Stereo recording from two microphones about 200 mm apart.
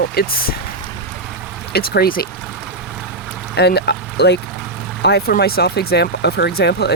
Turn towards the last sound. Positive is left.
turn(degrees=55)  # may be behind; listen again after turning